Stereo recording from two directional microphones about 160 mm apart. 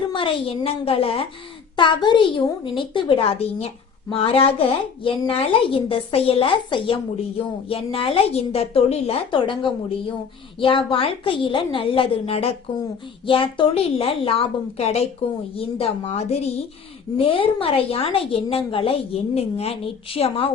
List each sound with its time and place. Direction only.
0.1 s speech: 30° left (ahead or behind)